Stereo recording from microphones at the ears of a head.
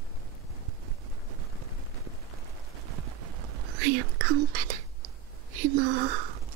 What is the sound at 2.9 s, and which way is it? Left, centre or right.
Whispering, right.